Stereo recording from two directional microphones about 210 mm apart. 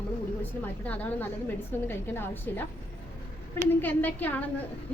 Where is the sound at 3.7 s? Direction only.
10° left (ahead or behind).